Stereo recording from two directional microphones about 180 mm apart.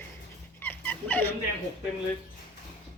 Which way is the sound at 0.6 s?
10° left (ahead or behind).